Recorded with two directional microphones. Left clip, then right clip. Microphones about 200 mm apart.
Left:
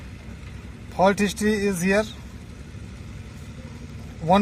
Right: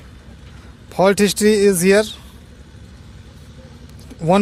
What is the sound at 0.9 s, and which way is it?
Speech, 60° right (ahead or behind).